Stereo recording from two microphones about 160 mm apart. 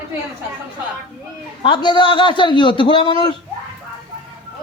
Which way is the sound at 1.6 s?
30° left (ahead or behind).